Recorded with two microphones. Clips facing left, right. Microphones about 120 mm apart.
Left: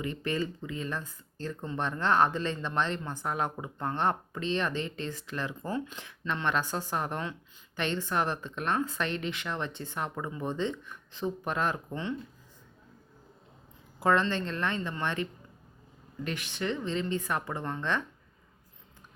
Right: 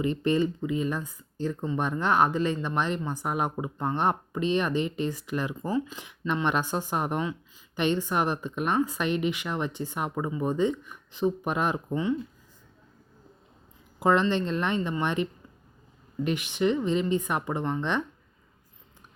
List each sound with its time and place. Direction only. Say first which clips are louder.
0.0 s speech: right 7 dB; 20° right (ahead or behind); by 6.1 s 5° right (ahead or behind)
6.1 s speech: right 3 dB; 15° right (ahead or behind)
14.0 s speech: right 3 dB; 15° right (ahead or behind)